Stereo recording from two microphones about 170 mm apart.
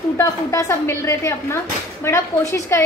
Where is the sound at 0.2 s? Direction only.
20° left (ahead or behind).